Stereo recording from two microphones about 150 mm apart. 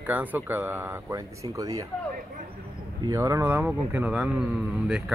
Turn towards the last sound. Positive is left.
turn(degrees=-5)  # may be behind; listen again after turning